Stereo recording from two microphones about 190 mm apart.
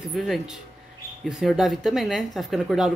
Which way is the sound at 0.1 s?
Centre (ahead or behind).